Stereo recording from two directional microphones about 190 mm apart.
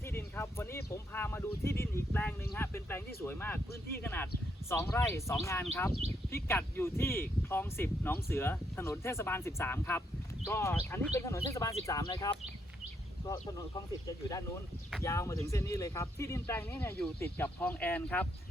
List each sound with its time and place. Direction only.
0.3 s speech: 15° left (ahead or behind)
13.5 s speech: 15° left (ahead or behind)